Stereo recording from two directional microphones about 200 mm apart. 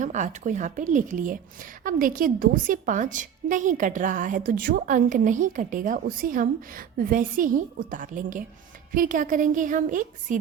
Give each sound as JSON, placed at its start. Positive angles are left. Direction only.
{"t": 0.0, "sound": "a woman's voice", "side_deg": -35}